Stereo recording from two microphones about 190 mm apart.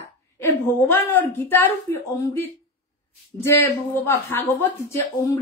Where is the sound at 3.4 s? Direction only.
10° left (ahead or behind).